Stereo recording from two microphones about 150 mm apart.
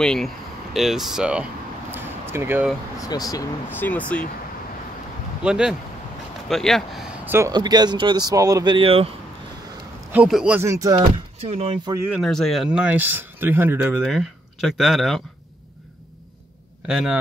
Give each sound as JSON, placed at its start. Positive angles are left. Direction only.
{"t": 0.0, "sound": "speech", "side_deg": 5}
{"t": 3.0, "sound": "speech", "side_deg": 25}
{"t": 3.7, "sound": "speech", "side_deg": 10}
{"t": 5.4, "sound": "speech", "side_deg": -5}
{"t": 7.2, "sound": "speech", "side_deg": -15}
{"t": 7.5, "sound": "speech", "side_deg": -25}
{"t": 10.1, "sound": "speech", "side_deg": -5}
{"t": 10.7, "sound": "speech", "side_deg": -25}
{"t": 11.4, "sound": "speech", "side_deg": -45}
{"t": 12.1, "sound": "speech", "side_deg": 0}
{"t": 12.8, "sound": "speech", "side_deg": -10}
{"t": 14.0, "sound": "speech", "side_deg": 0}
{"t": 16.8, "sound": "speech", "side_deg": -5}